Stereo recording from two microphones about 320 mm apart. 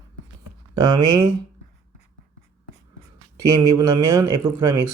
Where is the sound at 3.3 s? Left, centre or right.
Right.